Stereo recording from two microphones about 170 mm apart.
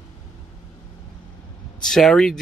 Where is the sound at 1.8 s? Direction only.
5° left (ahead or behind).